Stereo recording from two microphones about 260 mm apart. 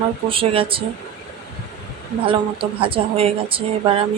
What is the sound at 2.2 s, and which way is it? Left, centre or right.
A woman's voice, right.